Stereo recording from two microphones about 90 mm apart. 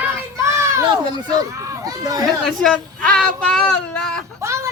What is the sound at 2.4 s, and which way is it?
Speech, 5° left (ahead or behind).